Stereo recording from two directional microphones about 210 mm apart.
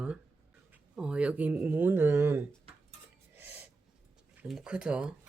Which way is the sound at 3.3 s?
10° right (ahead or behind).